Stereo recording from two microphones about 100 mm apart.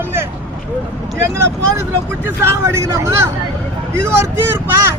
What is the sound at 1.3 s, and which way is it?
Speech, 30° right (ahead or behind).